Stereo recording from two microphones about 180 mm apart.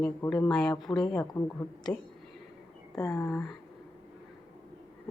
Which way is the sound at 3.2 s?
5° left (ahead or behind).